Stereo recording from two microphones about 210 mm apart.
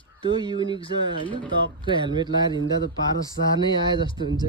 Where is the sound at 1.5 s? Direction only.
20° right (ahead or behind).